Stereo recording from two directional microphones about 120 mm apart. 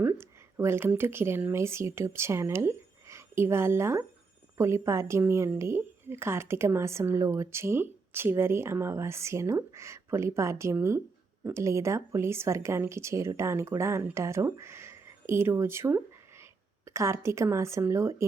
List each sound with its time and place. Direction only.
0.0 s a woman's voice: 20° right (ahead or behind)